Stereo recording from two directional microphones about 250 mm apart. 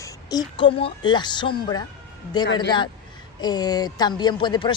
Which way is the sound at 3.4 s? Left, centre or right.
Centre.